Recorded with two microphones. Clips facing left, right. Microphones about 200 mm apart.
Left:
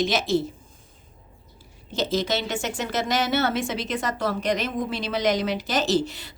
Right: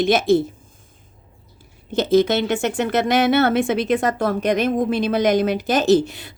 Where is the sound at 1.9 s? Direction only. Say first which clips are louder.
Right 9 dB; 55° right (ahead or behind).